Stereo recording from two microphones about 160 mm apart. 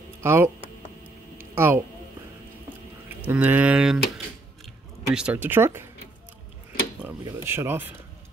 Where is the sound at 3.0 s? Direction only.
10° right (ahead or behind).